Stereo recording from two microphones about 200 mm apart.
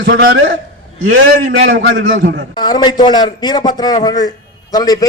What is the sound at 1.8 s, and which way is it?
Speech, 65° right (ahead or behind).